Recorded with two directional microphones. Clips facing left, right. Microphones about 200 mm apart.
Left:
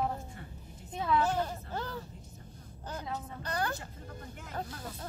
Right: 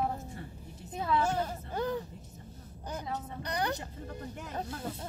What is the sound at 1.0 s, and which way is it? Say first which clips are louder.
Speech: even; 10° right (ahead or behind).